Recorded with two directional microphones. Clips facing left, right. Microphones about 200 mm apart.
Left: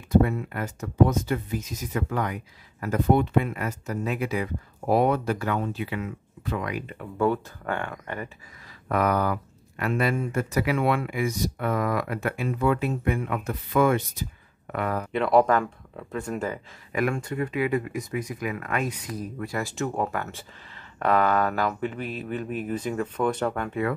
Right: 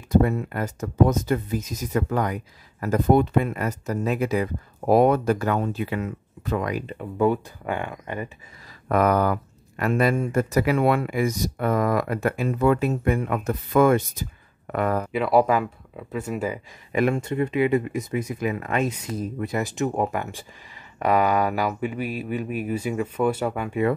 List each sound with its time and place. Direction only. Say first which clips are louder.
0.2 s speech: right 2 dB; 40° right (ahead or behind)
6.9 s speech: right 2 dB; 20° right (ahead or behind)
8.8 s speech: right 4 dB; 45° right (ahead or behind)
15.1 s speech: even; 5° right (ahead or behind)
16.9 s speech: right 4 dB; 25° right (ahead or behind); by 23.8 s 10° right (ahead or behind)